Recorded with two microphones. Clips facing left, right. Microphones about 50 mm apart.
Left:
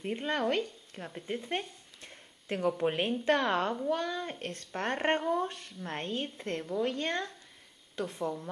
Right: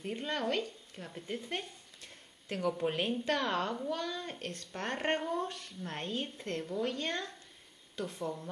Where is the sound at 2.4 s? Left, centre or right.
Left.